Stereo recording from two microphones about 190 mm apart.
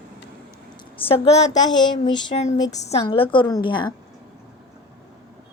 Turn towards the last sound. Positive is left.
turn(degrees=25)  # may be behind; listen again after turning